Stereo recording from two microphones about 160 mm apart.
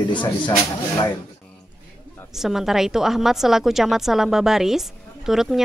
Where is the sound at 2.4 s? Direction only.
Centre (ahead or behind).